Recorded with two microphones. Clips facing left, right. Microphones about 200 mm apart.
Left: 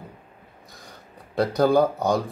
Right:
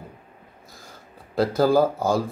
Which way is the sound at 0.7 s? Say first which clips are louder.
Left 1 dB; centre (ahead or behind).